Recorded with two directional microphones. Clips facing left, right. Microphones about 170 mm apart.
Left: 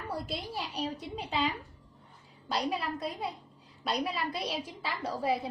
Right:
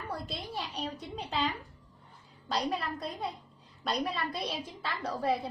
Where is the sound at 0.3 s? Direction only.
5° left (ahead or behind).